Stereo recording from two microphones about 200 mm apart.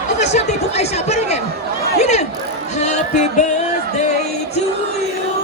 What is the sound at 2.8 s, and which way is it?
Music, 35° left (ahead or behind).